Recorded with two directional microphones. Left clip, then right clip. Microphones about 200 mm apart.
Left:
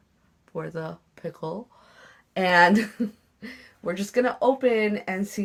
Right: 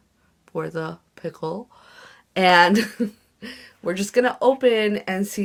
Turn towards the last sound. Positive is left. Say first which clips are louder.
# right 4 dB
turn(degrees=-45)  # may be behind; listen again after turning